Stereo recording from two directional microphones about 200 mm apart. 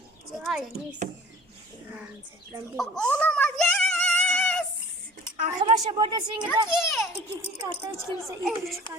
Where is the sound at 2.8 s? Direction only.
5° left (ahead or behind).